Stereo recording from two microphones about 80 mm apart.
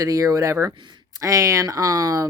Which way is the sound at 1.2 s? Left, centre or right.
Right.